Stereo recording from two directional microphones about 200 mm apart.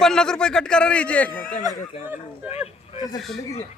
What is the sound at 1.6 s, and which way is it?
Speech, 20° right (ahead or behind).